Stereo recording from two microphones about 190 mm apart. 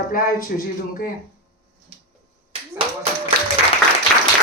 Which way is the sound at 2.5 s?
30° right (ahead or behind).